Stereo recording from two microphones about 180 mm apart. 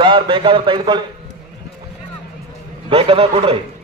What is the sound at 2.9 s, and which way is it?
Speech, 30° right (ahead or behind).